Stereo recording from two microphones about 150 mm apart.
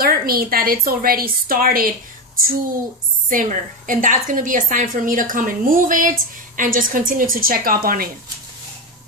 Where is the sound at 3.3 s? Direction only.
65° right (ahead or behind).